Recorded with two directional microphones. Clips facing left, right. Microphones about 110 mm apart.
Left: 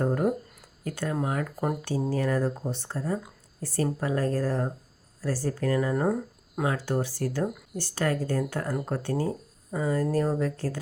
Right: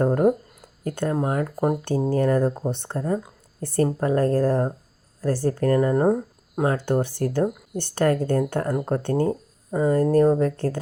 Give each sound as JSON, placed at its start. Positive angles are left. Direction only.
{"t": 0.0, "sound": "speech", "side_deg": -50}
{"t": 1.8, "sound": "speech", "side_deg": -50}
{"t": 3.8, "sound": "speech", "side_deg": -45}
{"t": 6.7, "sound": "speech", "side_deg": -55}